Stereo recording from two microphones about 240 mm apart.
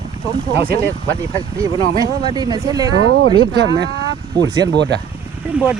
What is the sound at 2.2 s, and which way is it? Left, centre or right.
Speech, centre.